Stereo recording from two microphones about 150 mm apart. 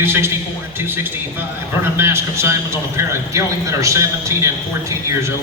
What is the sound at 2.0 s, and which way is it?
A man's voice, 15° right (ahead or behind).